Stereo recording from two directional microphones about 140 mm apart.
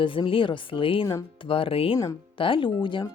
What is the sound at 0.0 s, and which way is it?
Speech, 40° left (ahead or behind).